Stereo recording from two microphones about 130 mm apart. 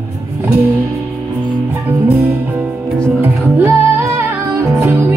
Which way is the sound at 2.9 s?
20° right (ahead or behind).